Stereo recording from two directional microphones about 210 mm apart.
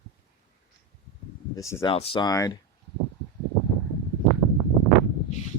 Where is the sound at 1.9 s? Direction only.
25° left (ahead or behind).